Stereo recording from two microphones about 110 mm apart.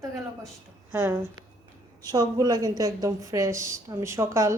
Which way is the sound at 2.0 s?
35° right (ahead or behind).